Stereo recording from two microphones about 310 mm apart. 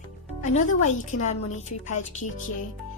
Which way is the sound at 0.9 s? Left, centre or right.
Left.